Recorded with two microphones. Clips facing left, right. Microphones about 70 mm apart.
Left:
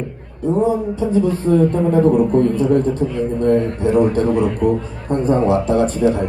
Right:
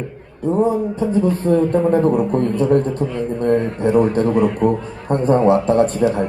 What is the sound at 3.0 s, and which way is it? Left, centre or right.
Speech, right.